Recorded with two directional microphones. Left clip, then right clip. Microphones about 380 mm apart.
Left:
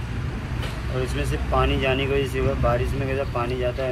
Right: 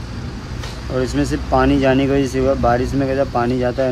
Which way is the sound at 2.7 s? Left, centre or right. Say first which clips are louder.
Right 7 dB; right.